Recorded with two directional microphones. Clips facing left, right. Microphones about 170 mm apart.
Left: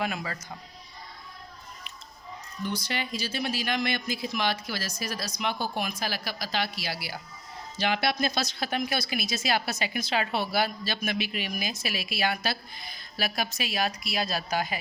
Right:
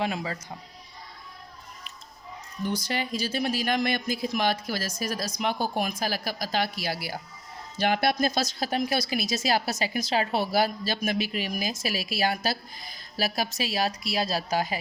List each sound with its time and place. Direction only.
0.0 s speech: 25° right (ahead or behind)
2.6 s speech: 45° right (ahead or behind)